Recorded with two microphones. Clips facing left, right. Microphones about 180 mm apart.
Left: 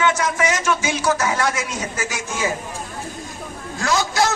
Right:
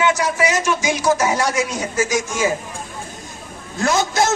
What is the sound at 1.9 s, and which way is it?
Speech, 40° right (ahead or behind).